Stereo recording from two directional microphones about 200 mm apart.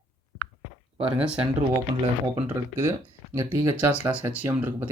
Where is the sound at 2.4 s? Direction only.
10° right (ahead or behind).